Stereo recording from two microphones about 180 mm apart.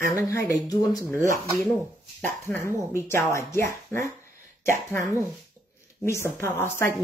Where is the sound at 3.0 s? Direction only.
15° left (ahead or behind).